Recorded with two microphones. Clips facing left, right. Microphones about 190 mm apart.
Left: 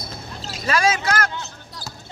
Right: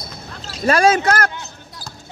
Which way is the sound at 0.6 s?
55° right (ahead or behind).